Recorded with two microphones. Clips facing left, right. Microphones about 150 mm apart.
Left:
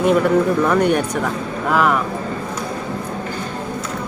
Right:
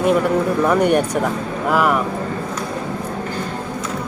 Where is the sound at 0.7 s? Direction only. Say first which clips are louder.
Right 1 dB; 10° right (ahead or behind).